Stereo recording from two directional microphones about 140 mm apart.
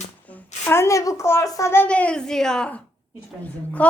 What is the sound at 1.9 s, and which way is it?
A child's voice, 10° left (ahead or behind).